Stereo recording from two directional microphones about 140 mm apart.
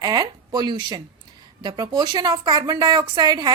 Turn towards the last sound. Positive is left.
turn(degrees=-30)  # may be behind; listen again after turning